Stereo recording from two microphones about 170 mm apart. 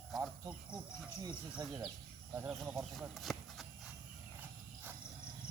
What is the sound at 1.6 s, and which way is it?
Speech, 20° right (ahead or behind).